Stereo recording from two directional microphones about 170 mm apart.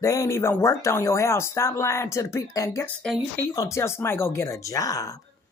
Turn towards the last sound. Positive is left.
turn(degrees=20)  # may be behind; listen again after turning